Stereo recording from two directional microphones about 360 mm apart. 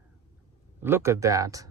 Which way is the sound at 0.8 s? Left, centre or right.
Centre.